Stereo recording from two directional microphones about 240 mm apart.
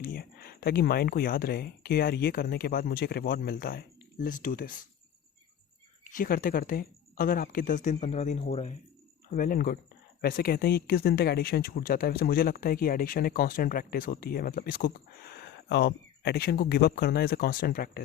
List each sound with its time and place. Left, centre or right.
0.0 s speech: left
6.1 s speech: left